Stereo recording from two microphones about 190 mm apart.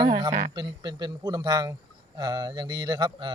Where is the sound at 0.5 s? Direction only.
25° right (ahead or behind).